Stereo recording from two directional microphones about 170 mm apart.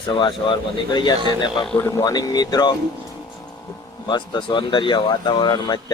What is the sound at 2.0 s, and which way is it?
Speech, 20° left (ahead or behind).